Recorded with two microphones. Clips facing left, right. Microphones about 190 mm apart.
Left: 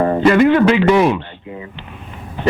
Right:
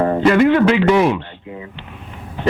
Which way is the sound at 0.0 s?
15° left (ahead or behind).